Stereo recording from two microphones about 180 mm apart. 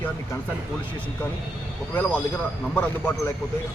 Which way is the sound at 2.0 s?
10° left (ahead or behind).